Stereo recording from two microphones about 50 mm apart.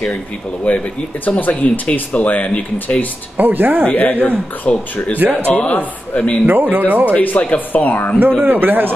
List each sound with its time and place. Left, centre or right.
0.7 s speech: left
3.3 s speech: right
3.8 s speech: left
4.6 s speech: left
6.4 s speech: right
7.2 s speech: left
8.5 s speech: right